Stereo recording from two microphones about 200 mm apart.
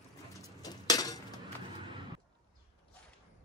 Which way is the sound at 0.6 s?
20° left (ahead or behind).